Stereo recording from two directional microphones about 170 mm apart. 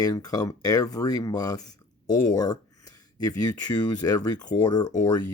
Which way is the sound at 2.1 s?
50° left (ahead or behind).